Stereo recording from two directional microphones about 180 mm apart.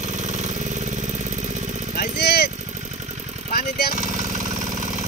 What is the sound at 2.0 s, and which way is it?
Vehicle, 65° left (ahead or behind).